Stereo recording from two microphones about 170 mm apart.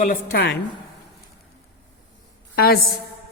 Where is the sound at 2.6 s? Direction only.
65° left (ahead or behind).